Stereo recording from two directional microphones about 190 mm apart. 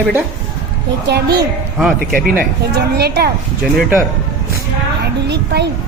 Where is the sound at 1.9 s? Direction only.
50° right (ahead or behind).